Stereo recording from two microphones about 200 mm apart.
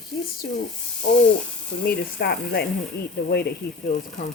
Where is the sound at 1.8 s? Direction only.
55° left (ahead or behind).